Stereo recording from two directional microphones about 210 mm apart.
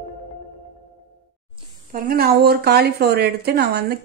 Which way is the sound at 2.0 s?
45° right (ahead or behind).